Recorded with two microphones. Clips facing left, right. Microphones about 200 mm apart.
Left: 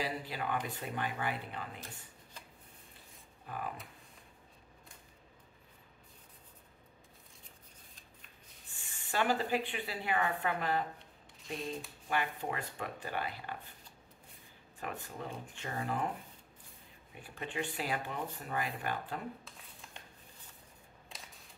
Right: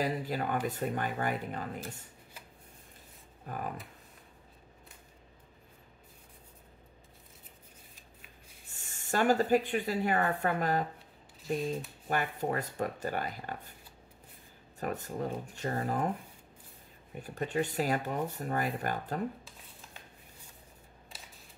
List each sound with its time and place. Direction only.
0.0 s speech: 45° right (ahead or behind)
3.4 s speech: 45° right (ahead or behind)
8.7 s speech: 45° right (ahead or behind)
12.1 s speech: 40° right (ahead or behind)
14.8 s speech: 40° right (ahead or behind)
17.1 s speech: 40° right (ahead or behind)
19.4 s a sound: centre (ahead or behind)